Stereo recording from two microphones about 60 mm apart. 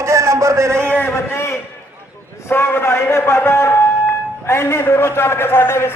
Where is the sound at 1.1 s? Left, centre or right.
Left.